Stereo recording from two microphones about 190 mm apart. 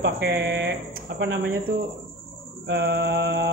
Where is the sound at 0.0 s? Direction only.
65° right (ahead or behind).